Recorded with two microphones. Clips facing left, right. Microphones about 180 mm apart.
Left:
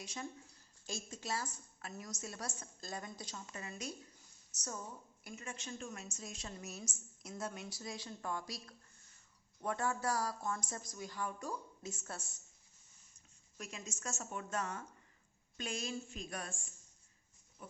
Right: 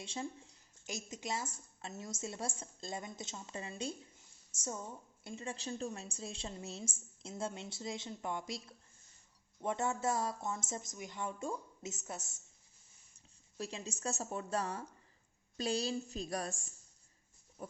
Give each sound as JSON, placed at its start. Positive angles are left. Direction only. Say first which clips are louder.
{"t": 0.0, "sound": "a woman's voice", "louder": "right 3 dB", "side_deg": -25}
{"t": 13.6, "sound": "a woman's voice", "louder": "right 6 dB", "side_deg": -30}
{"t": 17.6, "sound": "pig", "louder": "right 6 dB", "side_deg": -40}